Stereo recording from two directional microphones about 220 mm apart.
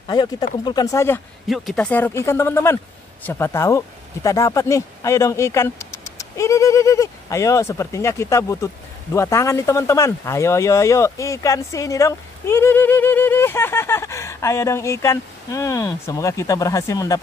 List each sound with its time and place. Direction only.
0.1 s speech: 20° left (ahead or behind)